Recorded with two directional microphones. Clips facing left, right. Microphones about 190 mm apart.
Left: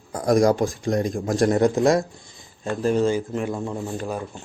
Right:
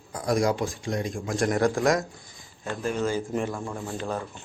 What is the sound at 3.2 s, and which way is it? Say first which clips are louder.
Speech: left 2 dB; 5° left (ahead or behind).